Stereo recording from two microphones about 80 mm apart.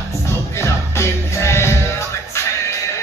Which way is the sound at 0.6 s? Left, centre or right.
Left.